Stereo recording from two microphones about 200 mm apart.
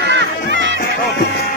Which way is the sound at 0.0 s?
60° right (ahead or behind).